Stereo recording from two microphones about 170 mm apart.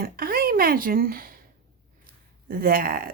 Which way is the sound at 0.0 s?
60° right (ahead or behind).